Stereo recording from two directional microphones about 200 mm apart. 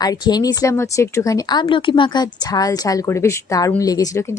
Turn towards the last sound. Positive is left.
turn(degrees=20)  # may be behind; listen again after turning